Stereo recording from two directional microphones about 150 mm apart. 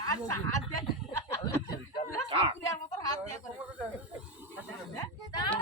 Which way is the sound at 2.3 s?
35° right (ahead or behind).